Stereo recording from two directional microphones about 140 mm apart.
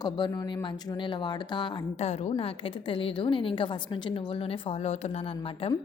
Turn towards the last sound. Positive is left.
turn(degrees=45)  # may be behind; listen again after turning